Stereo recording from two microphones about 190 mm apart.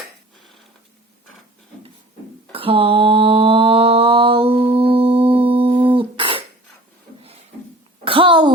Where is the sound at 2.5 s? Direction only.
30° right (ahead or behind).